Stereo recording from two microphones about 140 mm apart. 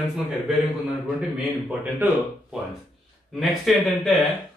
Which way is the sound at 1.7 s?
15° right (ahead or behind).